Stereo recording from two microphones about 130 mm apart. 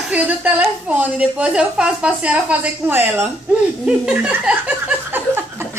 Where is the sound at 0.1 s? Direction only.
10° right (ahead or behind).